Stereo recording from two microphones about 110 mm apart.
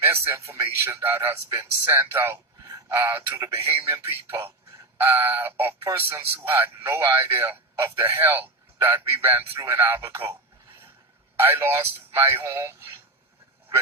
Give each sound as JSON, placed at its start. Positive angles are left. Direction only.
{"t": 0.0, "sound": "a man's voice", "side_deg": -20}
{"t": 11.3, "sound": "speech", "side_deg": -20}